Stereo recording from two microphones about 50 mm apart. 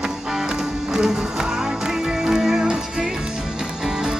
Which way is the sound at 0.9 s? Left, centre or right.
Centre.